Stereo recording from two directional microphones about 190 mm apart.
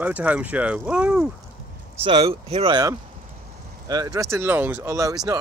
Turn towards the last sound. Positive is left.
turn(degrees=-15)  # may be behind; listen again after turning